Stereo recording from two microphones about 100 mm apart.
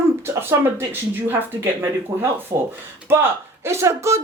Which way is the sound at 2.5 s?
35° right (ahead or behind).